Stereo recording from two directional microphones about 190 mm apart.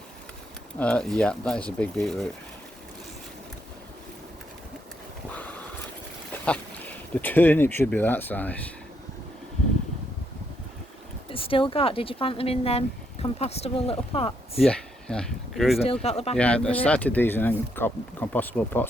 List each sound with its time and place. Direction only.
0.8 s speech: 5° left (ahead or behind)
5.4 s a sound: 5° left (ahead or behind)
6.4 s speech: 5° left (ahead or behind)
11.3 s speech: 30° left (ahead or behind)
14.6 s speech: 5° left (ahead or behind)
16.0 s speech: 35° left (ahead or behind)
16.4 s speech: 5° left (ahead or behind)